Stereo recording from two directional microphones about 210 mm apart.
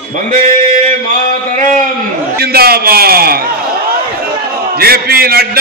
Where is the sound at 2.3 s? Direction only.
50° right (ahead or behind).